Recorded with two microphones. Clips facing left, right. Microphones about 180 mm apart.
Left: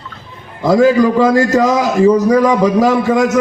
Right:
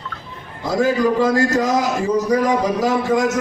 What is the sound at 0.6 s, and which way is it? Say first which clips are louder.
A man's voice: left 7 dB; 75° left (ahead or behind).